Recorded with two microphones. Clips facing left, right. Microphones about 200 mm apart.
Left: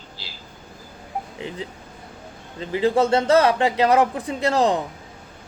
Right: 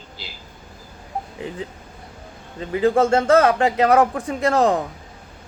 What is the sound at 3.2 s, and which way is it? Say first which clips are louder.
Speech: right 2 dB; 30° left (ahead or behind).